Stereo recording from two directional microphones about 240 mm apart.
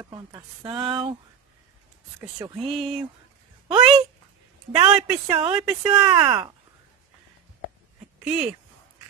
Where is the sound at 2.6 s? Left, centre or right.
Centre.